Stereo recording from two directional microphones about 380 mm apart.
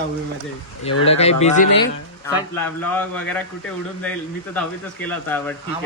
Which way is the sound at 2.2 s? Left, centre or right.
Centre.